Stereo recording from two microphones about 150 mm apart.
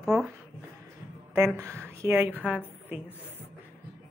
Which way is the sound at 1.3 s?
15° right (ahead or behind).